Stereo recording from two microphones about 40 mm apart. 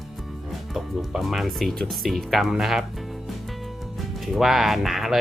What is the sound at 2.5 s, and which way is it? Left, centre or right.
Speech, centre.